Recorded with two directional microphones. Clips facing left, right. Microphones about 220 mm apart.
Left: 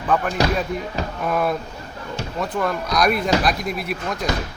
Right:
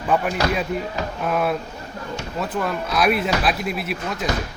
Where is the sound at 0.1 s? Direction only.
10° right (ahead or behind).